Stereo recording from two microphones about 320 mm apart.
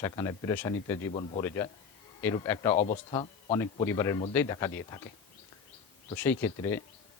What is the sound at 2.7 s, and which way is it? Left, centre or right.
Speech, left.